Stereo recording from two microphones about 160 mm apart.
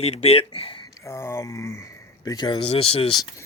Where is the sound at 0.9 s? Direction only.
20° left (ahead or behind).